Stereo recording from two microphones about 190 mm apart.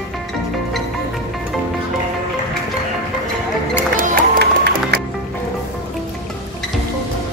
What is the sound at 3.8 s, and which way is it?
Music, 55° right (ahead or behind).